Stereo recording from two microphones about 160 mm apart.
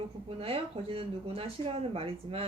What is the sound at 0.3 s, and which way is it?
Speech, 35° right (ahead or behind).